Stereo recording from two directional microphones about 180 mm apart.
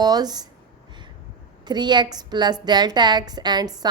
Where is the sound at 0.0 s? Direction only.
20° right (ahead or behind).